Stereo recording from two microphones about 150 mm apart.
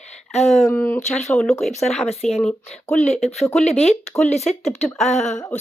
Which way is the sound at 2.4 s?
5° left (ahead or behind).